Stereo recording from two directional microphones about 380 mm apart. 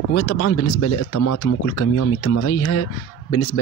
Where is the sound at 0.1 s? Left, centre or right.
Left.